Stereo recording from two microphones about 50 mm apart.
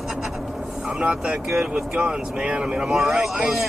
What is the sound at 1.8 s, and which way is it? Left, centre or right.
Speech, right.